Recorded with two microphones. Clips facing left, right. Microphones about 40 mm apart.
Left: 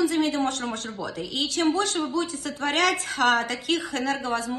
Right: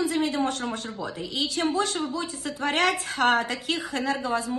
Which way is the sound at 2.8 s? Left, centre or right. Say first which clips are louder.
Left 1 dB; right.